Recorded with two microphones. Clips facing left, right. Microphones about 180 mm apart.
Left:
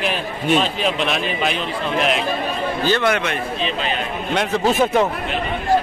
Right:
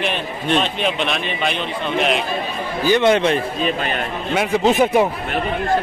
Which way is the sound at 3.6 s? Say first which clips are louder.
Right 2 dB; 50° right (ahead or behind).